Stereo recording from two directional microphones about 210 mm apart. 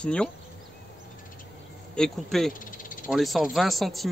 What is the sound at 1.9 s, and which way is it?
Speech, centre (ahead or behind).